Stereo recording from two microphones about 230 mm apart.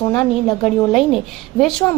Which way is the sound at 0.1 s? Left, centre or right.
Centre.